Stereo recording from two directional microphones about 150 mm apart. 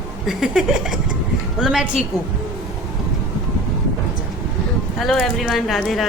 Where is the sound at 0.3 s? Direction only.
5° right (ahead or behind).